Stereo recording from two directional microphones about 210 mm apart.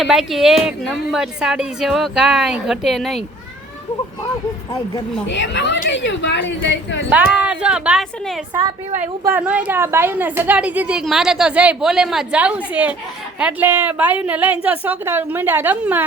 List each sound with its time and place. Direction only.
0.0 s a woman's voice: centre (ahead or behind)
5.3 s a woman's voice: 60° left (ahead or behind)
7.1 s a woman's voice: 5° right (ahead or behind)